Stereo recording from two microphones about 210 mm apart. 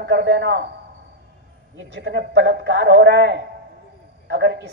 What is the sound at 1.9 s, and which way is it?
A man's voice, 55° right (ahead or behind).